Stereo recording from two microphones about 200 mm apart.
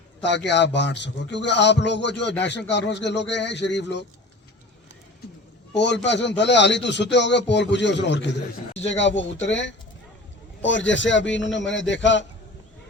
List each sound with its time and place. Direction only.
0.2 s speech: 60° left (ahead or behind)
5.7 s speech: 60° left (ahead or behind)